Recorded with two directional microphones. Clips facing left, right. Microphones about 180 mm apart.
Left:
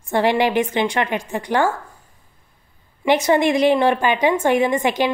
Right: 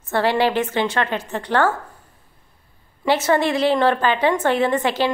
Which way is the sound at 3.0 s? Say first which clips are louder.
Left 2 dB; 15° left (ahead or behind).